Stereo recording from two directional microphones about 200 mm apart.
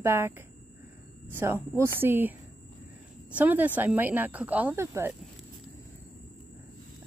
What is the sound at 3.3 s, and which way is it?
Speech, 10° right (ahead or behind).